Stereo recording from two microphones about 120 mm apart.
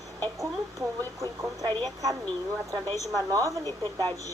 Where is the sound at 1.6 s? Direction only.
35° right (ahead or behind).